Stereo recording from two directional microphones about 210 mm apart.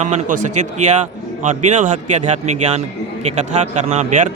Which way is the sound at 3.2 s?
35° right (ahead or behind).